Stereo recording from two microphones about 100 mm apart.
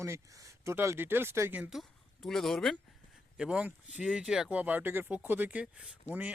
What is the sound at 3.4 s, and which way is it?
Speech, 10° right (ahead or behind).